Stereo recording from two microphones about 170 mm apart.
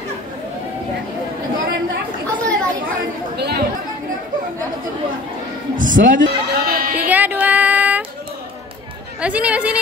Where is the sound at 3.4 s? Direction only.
70° right (ahead or behind).